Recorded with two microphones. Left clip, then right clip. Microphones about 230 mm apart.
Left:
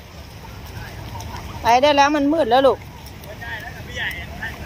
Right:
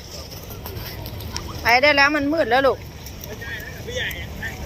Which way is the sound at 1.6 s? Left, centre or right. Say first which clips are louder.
Left 1 dB; left.